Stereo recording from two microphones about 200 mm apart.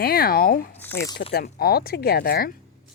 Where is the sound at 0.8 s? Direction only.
10° left (ahead or behind).